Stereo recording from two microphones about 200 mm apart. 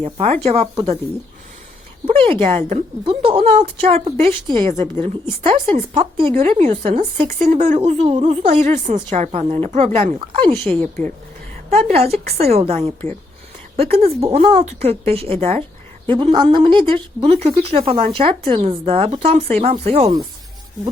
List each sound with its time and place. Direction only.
0.0 s speech: 35° right (ahead or behind)
2.0 s a woman's voice: 30° right (ahead or behind)
10.6 s speech: 10° left (ahead or behind)
11.7 s a woman's voice: 30° right (ahead or behind)